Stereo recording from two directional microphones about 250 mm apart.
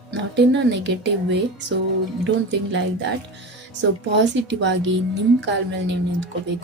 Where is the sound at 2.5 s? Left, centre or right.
Right.